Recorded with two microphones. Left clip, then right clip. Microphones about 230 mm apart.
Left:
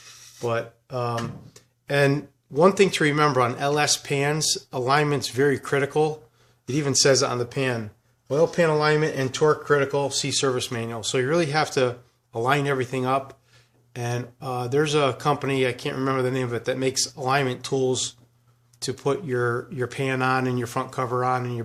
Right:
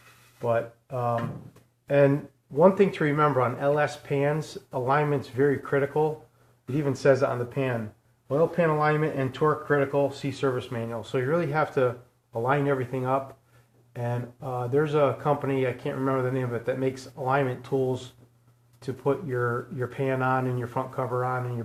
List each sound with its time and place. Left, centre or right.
0.4 s speech: left